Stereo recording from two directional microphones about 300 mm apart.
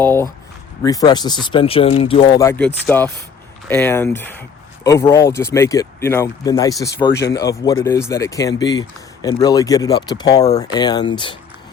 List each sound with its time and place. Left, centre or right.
0.0 s speech: centre
7.1 s speech: left
7.3 s speech: centre